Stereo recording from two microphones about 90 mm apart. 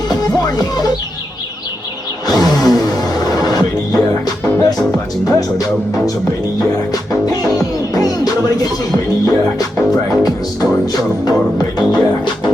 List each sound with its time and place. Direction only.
0.1 s music: 45° left (ahead or behind)
2.2 s music: 45° left (ahead or behind)